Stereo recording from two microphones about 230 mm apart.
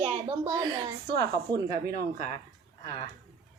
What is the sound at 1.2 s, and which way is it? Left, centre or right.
Speech, right.